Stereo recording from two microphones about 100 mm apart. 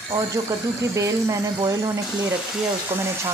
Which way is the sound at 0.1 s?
35° right (ahead or behind).